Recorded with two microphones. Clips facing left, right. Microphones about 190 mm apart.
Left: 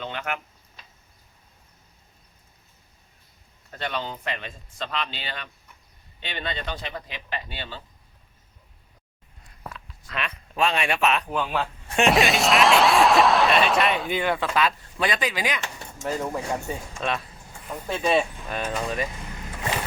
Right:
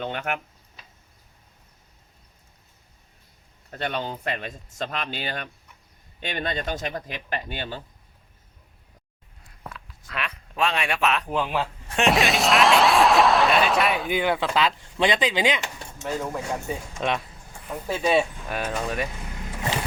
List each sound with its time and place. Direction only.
0.0 s speech: 50° right (ahead or behind)
3.7 s speech: 45° right (ahead or behind)
9.7 s a sound: centre (ahead or behind)
11.3 s speech: 15° right (ahead or behind)
11.9 s speech: centre (ahead or behind)
14.2 s speech: 15° right (ahead or behind)
16.2 s speech: centre (ahead or behind)
17.0 s speech: 15° right (ahead or behind)
17.7 s speech: 5° right (ahead or behind)